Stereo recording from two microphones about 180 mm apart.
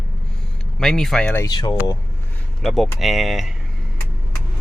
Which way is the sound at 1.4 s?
25° left (ahead or behind).